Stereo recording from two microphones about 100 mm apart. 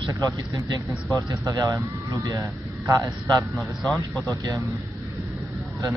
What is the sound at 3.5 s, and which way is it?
Speech, centre (ahead or behind).